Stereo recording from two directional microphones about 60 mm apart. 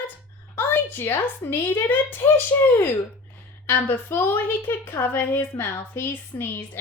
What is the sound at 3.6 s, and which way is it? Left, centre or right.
A woman's voice, left.